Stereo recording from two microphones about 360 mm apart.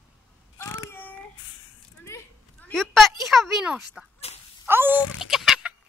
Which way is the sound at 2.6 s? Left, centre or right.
Centre.